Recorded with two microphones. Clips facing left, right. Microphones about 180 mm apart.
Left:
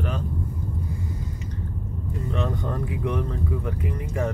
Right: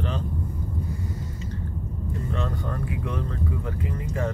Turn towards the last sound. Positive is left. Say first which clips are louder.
# left 3 dB
turn(degrees=20)  # may be behind; listen again after turning